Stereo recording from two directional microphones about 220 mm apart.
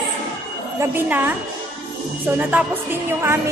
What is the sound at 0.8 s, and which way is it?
Speech, 10° right (ahead or behind).